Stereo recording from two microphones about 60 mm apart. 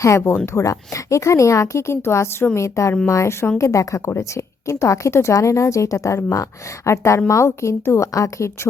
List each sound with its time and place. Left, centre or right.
0.3 s speech: left
0.6 s a woman's voice: left